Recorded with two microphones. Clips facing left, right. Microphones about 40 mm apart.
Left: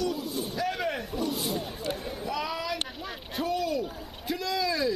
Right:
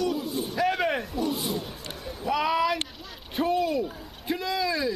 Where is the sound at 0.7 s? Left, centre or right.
Right.